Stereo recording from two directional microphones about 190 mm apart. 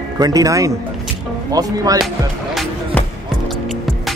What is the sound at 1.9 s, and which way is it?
Music, centre (ahead or behind).